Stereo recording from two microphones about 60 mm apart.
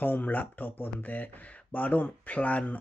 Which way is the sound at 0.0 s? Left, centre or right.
Left.